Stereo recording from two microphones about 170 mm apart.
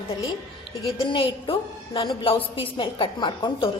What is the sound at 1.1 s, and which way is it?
A woman's voice, 30° left (ahead or behind).